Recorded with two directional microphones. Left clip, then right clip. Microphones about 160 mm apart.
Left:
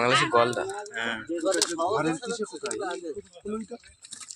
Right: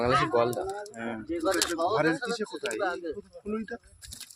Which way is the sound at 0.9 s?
55° right (ahead or behind).